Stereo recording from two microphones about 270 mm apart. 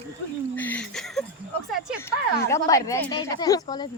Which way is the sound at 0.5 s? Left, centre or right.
Centre.